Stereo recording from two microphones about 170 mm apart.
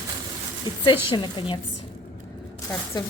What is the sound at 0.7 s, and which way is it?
Speech, 25° left (ahead or behind).